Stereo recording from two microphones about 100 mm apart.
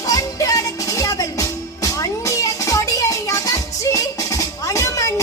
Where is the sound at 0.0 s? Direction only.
35° left (ahead or behind).